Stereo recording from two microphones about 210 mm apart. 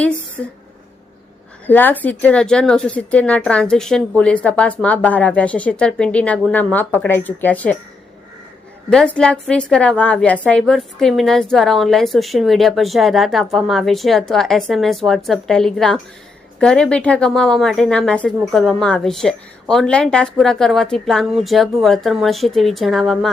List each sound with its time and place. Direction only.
1.6 s speech: 10° left (ahead or behind)
8.9 s a woman's voice: 5° left (ahead or behind)